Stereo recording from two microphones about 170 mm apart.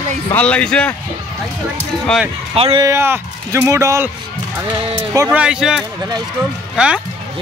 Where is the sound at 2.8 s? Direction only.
15° right (ahead or behind).